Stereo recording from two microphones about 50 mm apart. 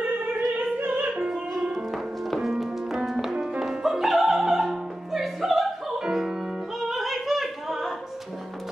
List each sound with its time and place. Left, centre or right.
0.1 s opera: right
1.6 s music: centre
1.9 s music: centre
6.8 s singing: centre